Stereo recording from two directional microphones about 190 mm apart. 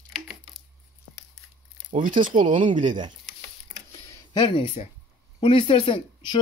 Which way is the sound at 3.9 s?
20° left (ahead or behind).